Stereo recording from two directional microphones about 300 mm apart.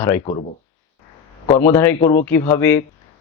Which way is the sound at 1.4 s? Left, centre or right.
Centre.